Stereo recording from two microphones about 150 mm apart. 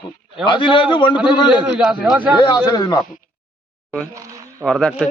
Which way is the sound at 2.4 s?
30° left (ahead or behind).